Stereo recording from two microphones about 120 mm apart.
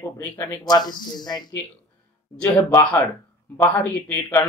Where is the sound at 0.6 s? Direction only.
35° left (ahead or behind).